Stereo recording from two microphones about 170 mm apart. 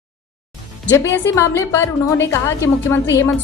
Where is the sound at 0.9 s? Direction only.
15° left (ahead or behind).